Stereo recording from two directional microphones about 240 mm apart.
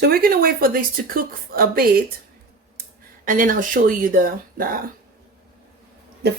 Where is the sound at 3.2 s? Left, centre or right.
Right.